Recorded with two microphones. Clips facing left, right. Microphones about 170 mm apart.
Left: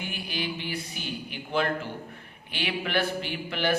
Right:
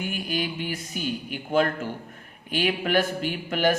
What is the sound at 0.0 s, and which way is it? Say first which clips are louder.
A man's voice: right 5 dB; 45° right (ahead or behind).